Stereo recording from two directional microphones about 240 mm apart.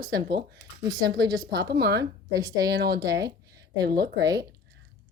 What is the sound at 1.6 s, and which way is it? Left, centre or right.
Speech, right.